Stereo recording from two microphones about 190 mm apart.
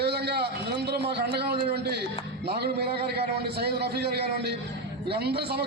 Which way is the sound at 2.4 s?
60° right (ahead or behind).